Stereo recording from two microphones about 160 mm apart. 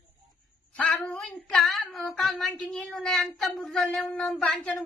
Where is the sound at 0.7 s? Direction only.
10° left (ahead or behind).